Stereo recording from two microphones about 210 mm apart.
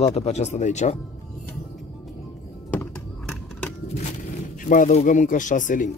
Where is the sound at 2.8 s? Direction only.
5° left (ahead or behind).